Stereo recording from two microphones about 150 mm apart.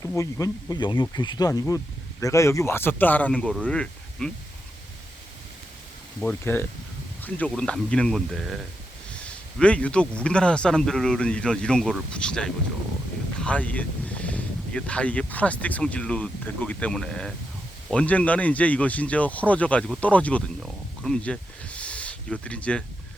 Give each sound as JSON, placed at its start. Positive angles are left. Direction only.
{"t": 0.0, "sound": "speech", "side_deg": 20}
{"t": 6.1, "sound": "speech", "side_deg": 10}